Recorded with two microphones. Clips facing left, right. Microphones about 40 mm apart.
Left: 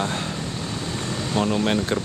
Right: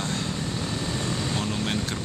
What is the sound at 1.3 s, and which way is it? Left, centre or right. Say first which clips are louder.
Speech: left 6 dB; centre.